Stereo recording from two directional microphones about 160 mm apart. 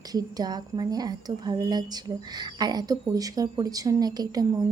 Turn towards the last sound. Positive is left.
turn(degrees=-25)  # may be behind; listen again after turning